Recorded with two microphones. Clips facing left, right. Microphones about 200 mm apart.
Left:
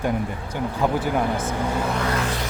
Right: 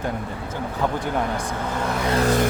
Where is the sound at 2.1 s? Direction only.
40° right (ahead or behind).